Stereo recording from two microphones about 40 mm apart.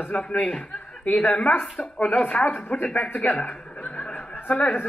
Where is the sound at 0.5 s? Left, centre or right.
Left.